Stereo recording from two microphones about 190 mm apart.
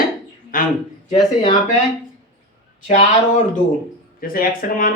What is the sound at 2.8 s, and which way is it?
Speech, 40° left (ahead or behind).